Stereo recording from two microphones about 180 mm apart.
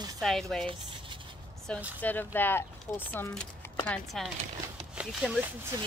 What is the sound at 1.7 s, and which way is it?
Speech, 5° left (ahead or behind).